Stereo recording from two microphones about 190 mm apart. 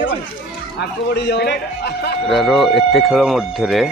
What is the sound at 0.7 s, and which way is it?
A man's voice, 60° left (ahead or behind).